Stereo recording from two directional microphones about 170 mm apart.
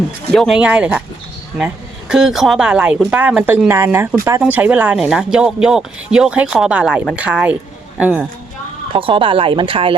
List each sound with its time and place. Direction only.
0.3 s speech: centre (ahead or behind)
8.9 s speech: 30° right (ahead or behind)